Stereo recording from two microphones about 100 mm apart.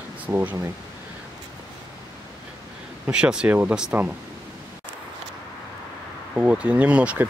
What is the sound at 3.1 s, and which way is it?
Speech, 10° right (ahead or behind).